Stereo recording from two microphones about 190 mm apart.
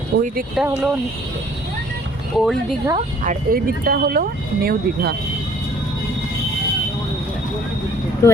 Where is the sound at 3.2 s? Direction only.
50° right (ahead or behind).